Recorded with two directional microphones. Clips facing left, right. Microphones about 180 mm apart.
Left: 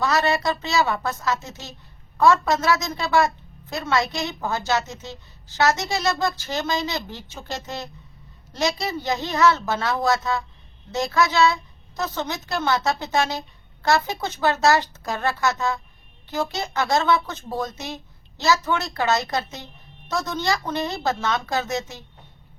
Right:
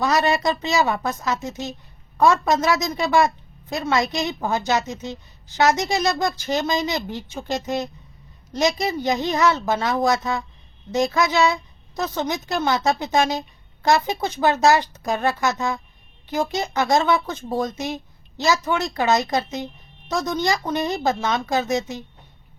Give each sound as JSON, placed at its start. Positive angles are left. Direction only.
{"t": 0.0, "sound": "a woman's voice", "side_deg": -15}